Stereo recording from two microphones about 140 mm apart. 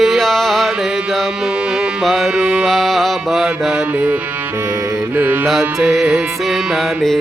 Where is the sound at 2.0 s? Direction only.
Centre (ahead or behind).